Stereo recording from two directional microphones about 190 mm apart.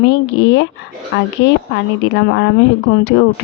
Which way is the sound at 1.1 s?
70° left (ahead or behind).